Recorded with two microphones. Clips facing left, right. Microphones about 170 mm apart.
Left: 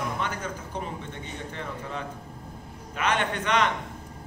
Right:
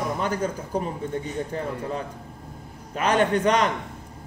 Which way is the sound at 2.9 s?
40° right (ahead or behind).